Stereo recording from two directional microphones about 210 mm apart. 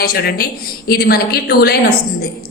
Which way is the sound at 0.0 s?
50° left (ahead or behind).